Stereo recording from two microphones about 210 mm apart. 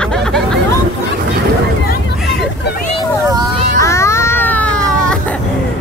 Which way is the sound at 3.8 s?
15° left (ahead or behind).